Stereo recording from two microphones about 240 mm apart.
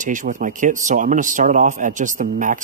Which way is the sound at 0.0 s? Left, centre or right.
Right.